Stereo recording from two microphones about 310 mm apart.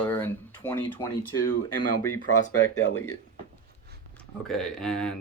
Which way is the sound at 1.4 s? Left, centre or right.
Left.